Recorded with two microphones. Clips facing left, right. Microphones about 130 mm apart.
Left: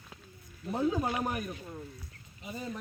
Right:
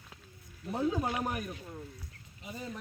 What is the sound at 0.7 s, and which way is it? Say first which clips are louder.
Speech: left 1 dB; 50° left (ahead or behind).